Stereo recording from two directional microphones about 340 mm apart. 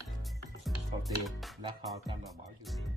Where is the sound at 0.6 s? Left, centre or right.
Centre.